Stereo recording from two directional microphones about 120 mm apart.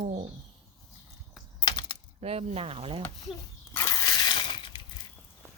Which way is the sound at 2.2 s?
60° right (ahead or behind).